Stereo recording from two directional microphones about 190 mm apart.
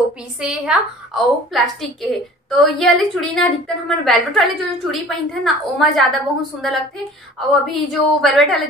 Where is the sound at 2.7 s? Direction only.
Centre (ahead or behind).